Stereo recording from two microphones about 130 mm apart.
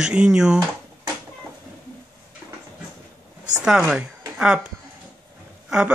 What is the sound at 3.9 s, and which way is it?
Speech, 5° right (ahead or behind).